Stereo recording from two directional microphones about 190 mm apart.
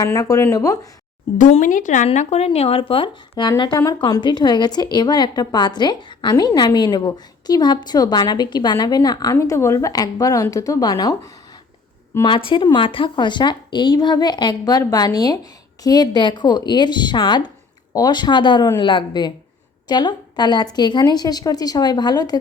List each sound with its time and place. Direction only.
0.0 s speech: 20° left (ahead or behind)
1.4 s speech: 40° left (ahead or behind); by 11.1 s 20° left (ahead or behind)
12.2 s a woman's voice: 25° left (ahead or behind)